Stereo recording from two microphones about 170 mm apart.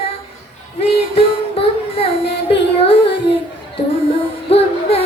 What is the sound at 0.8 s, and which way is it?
Child singing, 35° left (ahead or behind).